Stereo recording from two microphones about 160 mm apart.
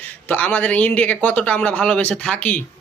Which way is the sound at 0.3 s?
10° left (ahead or behind).